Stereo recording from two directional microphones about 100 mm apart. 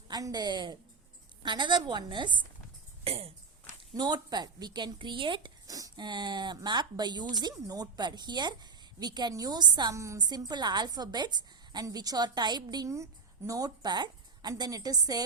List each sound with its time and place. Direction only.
0.1 s speech: 40° right (ahead or behind)
3.0 s a sound: 80° right
3.9 s speech: 45° right (ahead or behind)
5.6 s speech: 35° right (ahead or behind)
9.9 s a woman's voice: 30° right (ahead or behind)
10.2 s a woman's voice: 45° right (ahead or behind)